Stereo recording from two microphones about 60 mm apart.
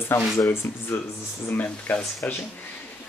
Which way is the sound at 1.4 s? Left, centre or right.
Left.